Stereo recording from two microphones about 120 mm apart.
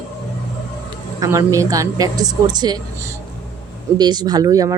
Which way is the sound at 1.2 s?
25° right (ahead or behind).